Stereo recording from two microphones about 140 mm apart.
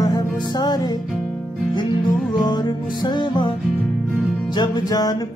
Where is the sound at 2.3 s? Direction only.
30° left (ahead or behind).